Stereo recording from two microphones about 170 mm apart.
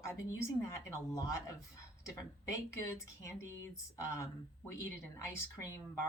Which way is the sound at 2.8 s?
15° left (ahead or behind).